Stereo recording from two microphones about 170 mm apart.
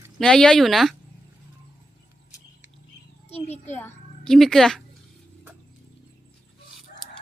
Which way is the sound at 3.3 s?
40° left (ahead or behind).